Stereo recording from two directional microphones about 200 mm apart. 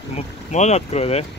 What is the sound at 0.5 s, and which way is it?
Speech, 35° left (ahead or behind).